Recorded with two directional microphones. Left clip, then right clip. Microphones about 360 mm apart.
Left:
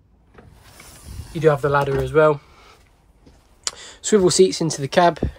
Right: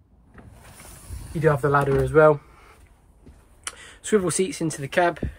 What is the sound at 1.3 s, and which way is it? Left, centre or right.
Speech, centre.